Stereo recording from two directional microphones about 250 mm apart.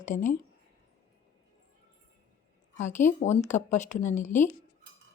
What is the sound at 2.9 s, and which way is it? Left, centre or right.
Speech, left.